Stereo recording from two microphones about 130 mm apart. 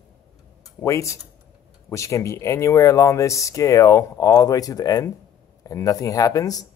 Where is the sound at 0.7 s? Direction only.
25° left (ahead or behind).